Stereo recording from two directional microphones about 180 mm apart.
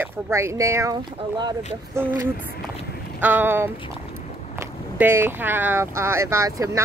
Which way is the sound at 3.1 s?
10° right (ahead or behind).